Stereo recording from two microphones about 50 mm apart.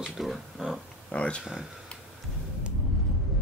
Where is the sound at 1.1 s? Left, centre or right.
Left.